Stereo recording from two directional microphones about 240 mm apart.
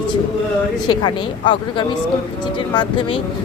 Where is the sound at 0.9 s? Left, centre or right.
Centre.